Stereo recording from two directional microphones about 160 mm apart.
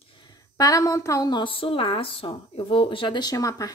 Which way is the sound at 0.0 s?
30° left (ahead or behind).